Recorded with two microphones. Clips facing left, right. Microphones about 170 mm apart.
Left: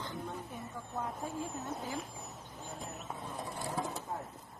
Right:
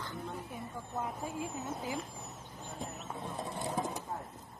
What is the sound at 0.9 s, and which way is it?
Speech, 5° right (ahead or behind).